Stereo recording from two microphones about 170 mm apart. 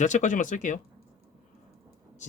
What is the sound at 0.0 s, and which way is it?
Speech, 45° left (ahead or behind).